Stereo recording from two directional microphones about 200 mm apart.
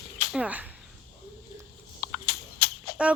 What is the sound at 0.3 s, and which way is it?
Speech, 5° right (ahead or behind).